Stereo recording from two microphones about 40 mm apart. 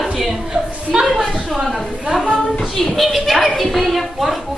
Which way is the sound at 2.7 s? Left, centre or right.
Centre.